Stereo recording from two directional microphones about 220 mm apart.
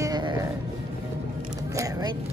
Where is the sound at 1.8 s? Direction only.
15° right (ahead or behind).